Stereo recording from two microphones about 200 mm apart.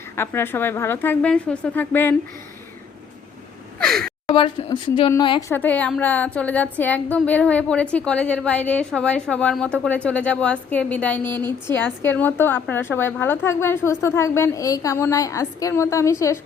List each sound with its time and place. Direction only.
0.2 s a woman's voice: 10° left (ahead or behind)
3.8 s gasp: 5° left (ahead or behind)
4.3 s speech: 25° left (ahead or behind)
5.5 s a woman's voice: 10° left (ahead or behind)